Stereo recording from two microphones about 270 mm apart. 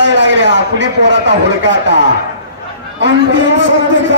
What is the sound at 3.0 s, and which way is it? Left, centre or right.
Speech, right.